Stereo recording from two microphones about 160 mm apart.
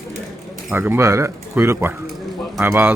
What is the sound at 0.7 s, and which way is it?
A man's voice, 15° right (ahead or behind).